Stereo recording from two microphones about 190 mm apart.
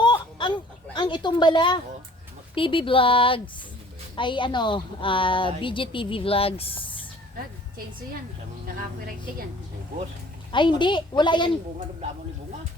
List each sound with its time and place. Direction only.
0.0 s a sound: 25° left (ahead or behind)
2.6 s a woman's voice: 25° left (ahead or behind)
10.5 s a woman's voice: 25° left (ahead or behind)